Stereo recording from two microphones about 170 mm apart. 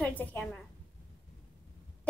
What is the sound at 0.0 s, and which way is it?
Speech, 10° left (ahead or behind).